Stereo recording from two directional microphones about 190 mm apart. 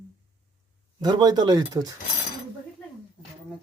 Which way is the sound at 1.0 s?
20° right (ahead or behind).